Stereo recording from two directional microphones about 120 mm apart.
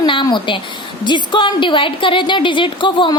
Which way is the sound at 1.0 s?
40° left (ahead or behind).